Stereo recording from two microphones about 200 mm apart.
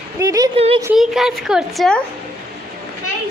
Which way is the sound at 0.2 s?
15° right (ahead or behind).